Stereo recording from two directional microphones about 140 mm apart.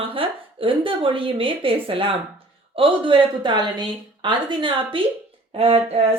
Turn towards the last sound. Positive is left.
turn(degrees=-45)  # may be behind; listen again after turning